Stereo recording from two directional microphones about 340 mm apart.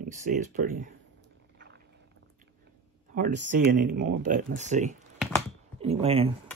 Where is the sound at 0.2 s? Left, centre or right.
Right.